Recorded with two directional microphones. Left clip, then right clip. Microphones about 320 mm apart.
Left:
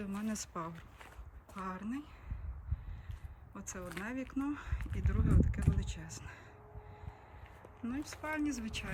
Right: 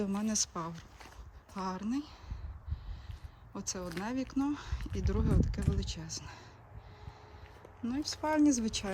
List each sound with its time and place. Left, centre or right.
0.0 s speech: centre
3.5 s speech: centre
7.9 s speech: centre